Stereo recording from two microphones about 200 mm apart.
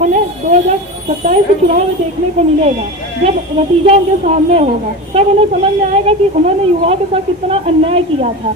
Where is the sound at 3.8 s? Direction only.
35° right (ahead or behind).